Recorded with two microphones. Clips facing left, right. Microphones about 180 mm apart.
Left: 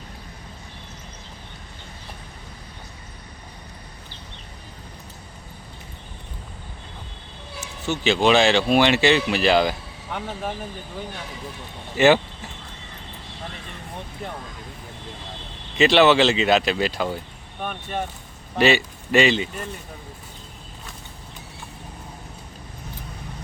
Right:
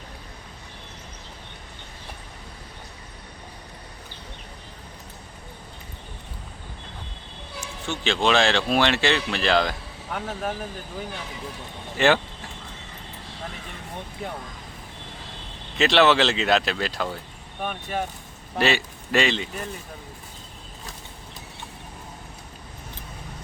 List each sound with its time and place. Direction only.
7.9 s speech: 5° left (ahead or behind)
11.9 s speech: 5° left (ahead or behind)
15.8 s a man's voice: centre (ahead or behind)